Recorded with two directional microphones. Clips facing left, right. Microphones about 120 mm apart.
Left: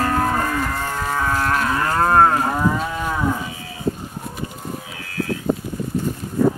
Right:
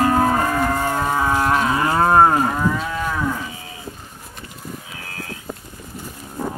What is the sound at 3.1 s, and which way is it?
Moo, 15° left (ahead or behind).